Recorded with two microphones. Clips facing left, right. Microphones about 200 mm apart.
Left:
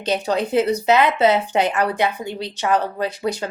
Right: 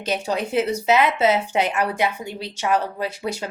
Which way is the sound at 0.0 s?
10° right (ahead or behind).